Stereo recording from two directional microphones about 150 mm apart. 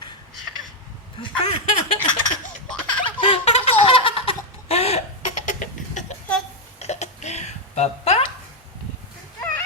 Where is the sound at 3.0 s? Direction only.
35° left (ahead or behind).